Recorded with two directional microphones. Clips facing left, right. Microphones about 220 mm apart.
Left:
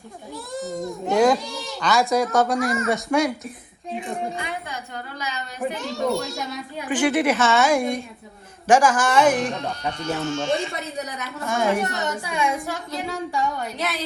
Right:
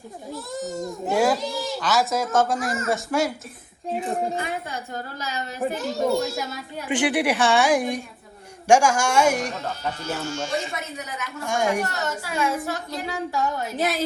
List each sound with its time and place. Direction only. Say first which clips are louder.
0.3 s a child's voice: left 1 dB; centre (ahead or behind)
5.8 s a child's voice: right 2 dB; centre (ahead or behind)
6.9 s a woman's voice: left 2 dB; 15° right (ahead or behind); by 10.7 s centre (ahead or behind)
10.9 s a woman's voice: left 3 dB; 35° left (ahead or behind)
11.4 s a woman's voice: left 1 dB; 15° right (ahead or behind)
11.8 s a child's voice: left 1 dB; centre (ahead or behind)
13.7 s a woman's voice: right 4 dB; 50° right (ahead or behind)